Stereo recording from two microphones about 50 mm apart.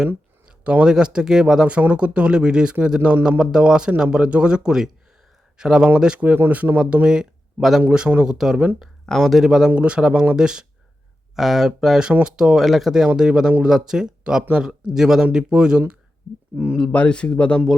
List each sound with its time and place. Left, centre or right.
0.4 s a sound: right
0.9 s speech: centre
1.8 s speech: right
6.7 s speech: centre
7.8 s speech: centre
9.7 s speech: right
10.0 s speech: centre
11.3 s speech: centre
12.5 s speech: centre
13.1 s speech: centre
16.9 s speech: left